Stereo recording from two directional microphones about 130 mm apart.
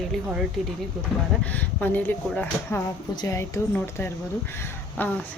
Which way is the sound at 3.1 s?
30° left (ahead or behind).